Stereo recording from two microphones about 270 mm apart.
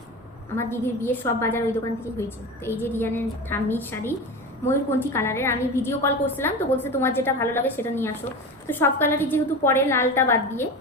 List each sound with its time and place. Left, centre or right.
0.5 s a woman's voice: centre